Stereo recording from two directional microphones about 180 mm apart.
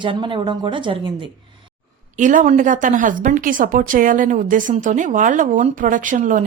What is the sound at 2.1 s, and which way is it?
Speech, 45° right (ahead or behind).